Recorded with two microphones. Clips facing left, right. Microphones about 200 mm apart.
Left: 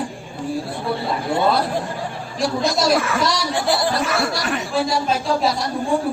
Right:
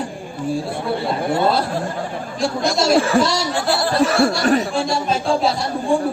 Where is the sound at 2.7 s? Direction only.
25° right (ahead or behind).